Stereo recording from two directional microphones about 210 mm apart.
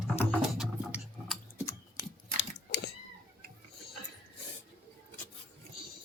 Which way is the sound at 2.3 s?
55° left (ahead or behind).